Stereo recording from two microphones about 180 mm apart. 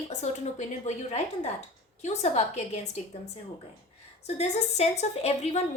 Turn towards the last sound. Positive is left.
turn(degrees=35)  # may be behind; listen again after turning